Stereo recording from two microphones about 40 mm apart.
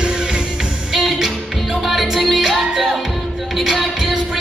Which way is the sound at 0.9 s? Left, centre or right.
Centre.